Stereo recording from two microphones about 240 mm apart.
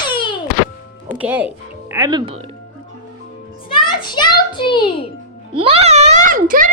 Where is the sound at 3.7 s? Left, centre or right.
Centre.